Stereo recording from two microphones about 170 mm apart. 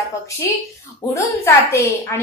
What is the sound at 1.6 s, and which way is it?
Speech, 15° left (ahead or behind).